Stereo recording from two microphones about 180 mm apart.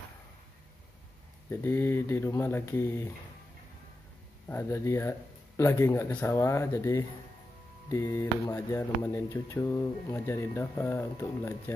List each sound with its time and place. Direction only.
1.5 s speech: 10° left (ahead or behind)
4.5 s speech: 15° left (ahead or behind)